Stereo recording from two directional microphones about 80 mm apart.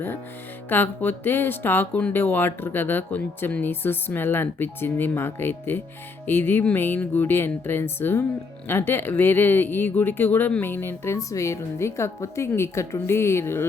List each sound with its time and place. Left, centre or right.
0.7 s speech: left
1.9 s speech: centre; by 13.7 s left